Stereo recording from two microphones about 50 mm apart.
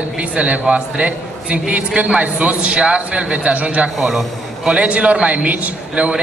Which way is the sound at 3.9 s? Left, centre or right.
Centre.